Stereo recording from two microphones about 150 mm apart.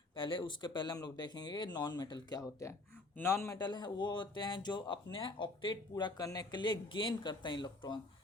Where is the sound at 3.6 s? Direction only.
30° left (ahead or behind).